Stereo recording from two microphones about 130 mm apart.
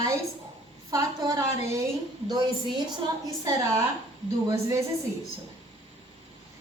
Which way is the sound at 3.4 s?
25° right (ahead or behind).